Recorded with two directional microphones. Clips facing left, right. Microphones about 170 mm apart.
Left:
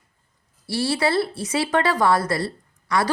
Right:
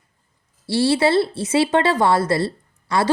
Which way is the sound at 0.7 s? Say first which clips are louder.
Right 5 dB; 25° right (ahead or behind).